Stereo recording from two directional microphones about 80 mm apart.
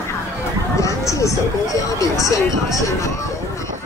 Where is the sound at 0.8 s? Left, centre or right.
Left.